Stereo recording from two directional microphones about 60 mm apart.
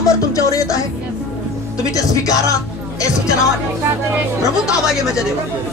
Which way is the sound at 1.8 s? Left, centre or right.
Left.